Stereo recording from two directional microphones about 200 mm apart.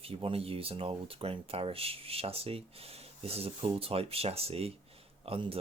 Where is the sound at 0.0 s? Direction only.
30° right (ahead or behind).